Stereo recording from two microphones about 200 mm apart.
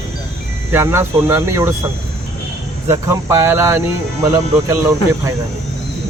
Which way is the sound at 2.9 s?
15° right (ahead or behind).